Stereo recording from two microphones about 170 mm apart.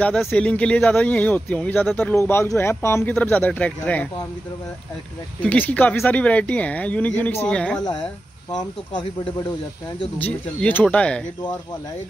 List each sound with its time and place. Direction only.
0.0 s speech: 5° left (ahead or behind)
5.4 s speech: 10° left (ahead or behind)
8.5 s speech: 25° left (ahead or behind)
10.1 s speech: 10° left (ahead or behind)